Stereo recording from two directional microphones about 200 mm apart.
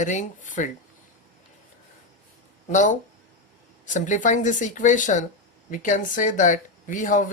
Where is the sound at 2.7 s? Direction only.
40° left (ahead or behind).